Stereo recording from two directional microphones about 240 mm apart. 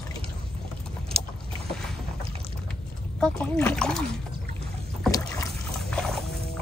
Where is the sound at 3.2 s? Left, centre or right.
Centre.